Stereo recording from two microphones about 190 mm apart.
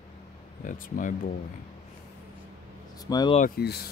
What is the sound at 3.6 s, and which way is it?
Speech, 55° left (ahead or behind).